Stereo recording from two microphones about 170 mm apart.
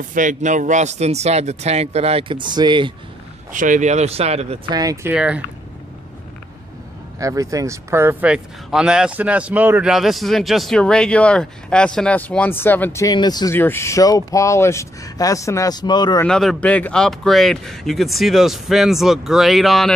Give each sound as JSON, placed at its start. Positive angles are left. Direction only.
{"t": 0.1, "sound": "speech", "side_deg": -50}
{"t": 3.5, "sound": "speech", "side_deg": -50}
{"t": 4.7, "sound": "speech", "side_deg": -20}
{"t": 5.1, "sound": "speech", "side_deg": -5}
{"t": 7.2, "sound": "speech", "side_deg": -20}
{"t": 13.6, "sound": "speech", "side_deg": 15}
{"t": 16.3, "sound": "speech", "side_deg": 5}